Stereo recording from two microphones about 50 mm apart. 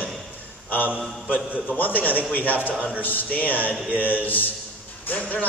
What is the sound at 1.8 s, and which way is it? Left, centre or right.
A man's voice, left.